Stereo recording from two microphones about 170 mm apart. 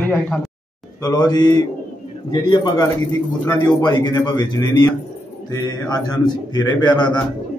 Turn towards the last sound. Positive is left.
turn(degrees=25)  # may be behind; listen again after turning